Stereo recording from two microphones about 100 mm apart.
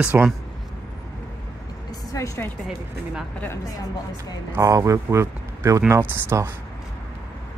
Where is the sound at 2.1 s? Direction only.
30° left (ahead or behind).